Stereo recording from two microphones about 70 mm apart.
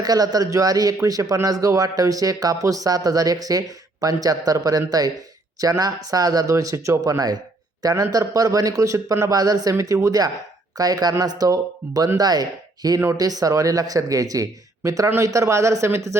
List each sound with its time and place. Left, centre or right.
0.0 s speech: right
7.0 s speech: right